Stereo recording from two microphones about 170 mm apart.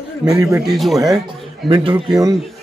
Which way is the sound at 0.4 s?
15° right (ahead or behind).